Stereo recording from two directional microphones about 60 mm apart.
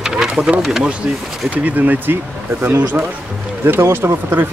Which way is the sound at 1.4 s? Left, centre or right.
Right.